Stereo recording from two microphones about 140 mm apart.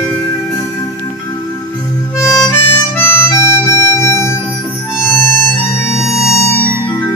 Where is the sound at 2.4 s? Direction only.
15° left (ahead or behind).